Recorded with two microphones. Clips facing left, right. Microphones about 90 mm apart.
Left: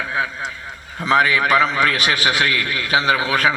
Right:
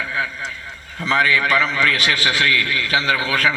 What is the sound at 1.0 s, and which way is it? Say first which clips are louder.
A man's voice: left 2 dB; 20° left (ahead or behind).